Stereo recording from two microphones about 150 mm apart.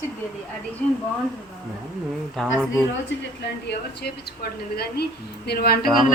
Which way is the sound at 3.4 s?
90° left.